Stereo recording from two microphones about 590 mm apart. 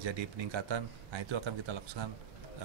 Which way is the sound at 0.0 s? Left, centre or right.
Right.